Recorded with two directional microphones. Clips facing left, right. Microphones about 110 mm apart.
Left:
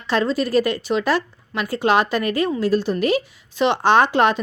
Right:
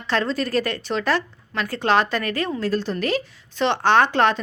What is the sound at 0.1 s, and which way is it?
A woman's voice, 10° left (ahead or behind).